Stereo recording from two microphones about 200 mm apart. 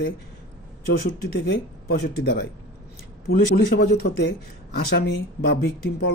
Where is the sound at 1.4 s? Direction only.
60° left (ahead or behind).